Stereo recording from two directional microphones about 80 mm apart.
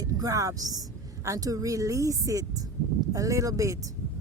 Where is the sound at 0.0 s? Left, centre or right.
Right.